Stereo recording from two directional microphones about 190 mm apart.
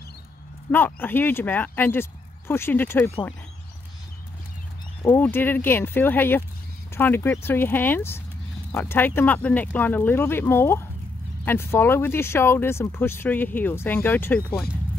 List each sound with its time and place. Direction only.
0.7 s speech: 10° left (ahead or behind)
5.0 s speech: 10° left (ahead or behind)